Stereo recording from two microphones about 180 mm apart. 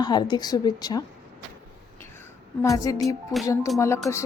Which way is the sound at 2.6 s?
20° left (ahead or behind).